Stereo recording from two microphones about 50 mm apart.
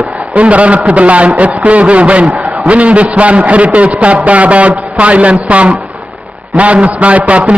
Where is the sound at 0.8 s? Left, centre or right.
Right.